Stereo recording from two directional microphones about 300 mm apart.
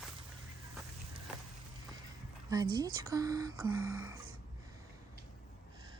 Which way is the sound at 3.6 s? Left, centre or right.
Right.